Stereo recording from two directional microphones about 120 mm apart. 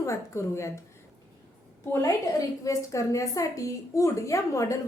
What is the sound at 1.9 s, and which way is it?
A woman's voice, 25° left (ahead or behind).